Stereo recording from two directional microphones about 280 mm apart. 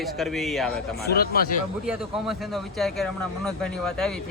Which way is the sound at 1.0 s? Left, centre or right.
Left.